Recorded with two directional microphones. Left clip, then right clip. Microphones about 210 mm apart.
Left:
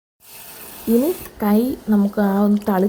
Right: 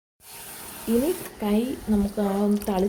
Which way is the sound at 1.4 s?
30° left (ahead or behind).